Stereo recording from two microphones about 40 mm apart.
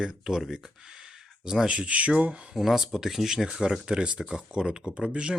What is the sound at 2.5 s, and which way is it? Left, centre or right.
Speech, centre.